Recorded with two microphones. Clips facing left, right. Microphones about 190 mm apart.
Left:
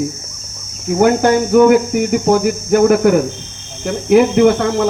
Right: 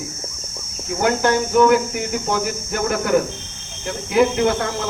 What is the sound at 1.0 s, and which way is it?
Speech, 50° left (ahead or behind).